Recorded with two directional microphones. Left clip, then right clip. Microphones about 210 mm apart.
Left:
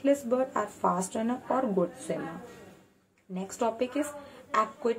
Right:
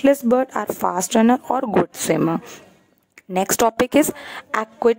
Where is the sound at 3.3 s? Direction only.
55° right (ahead or behind).